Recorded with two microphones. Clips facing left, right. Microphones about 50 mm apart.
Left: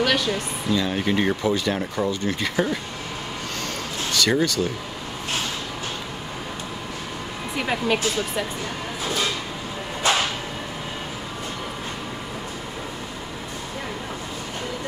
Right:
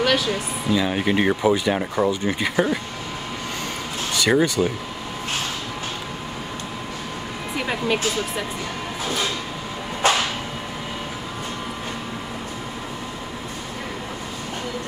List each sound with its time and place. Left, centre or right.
0.0 s speech: centre
4.1 s speech: centre
7.5 s speech: centre
10.0 s a sound: right